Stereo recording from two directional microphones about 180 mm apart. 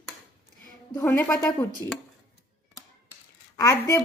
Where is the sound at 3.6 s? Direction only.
15° left (ahead or behind).